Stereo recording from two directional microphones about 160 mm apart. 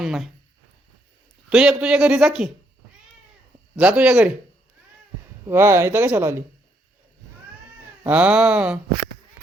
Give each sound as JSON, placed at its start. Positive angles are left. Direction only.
{"t": 0.0, "sound": "a man's voice", "side_deg": 0}
{"t": 1.5, "sound": "a man's voice", "side_deg": -5}
{"t": 3.8, "sound": "a man's voice", "side_deg": -5}
{"t": 5.5, "sound": "speech", "side_deg": -15}
{"t": 8.0, "sound": "speech", "side_deg": -10}